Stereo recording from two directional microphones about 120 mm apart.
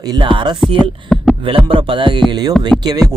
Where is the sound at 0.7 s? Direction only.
45° right (ahead or behind).